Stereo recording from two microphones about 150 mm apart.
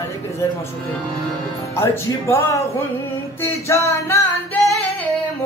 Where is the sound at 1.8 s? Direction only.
15° left (ahead or behind).